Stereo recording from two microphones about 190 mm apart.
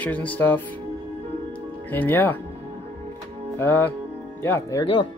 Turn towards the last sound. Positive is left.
turn(degrees=20)  # may be behind; listen again after turning